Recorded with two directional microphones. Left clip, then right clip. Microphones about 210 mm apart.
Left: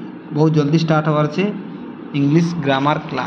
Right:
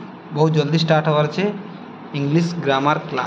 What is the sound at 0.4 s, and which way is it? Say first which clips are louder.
Speech: left 2 dB; 5° right (ahead or behind).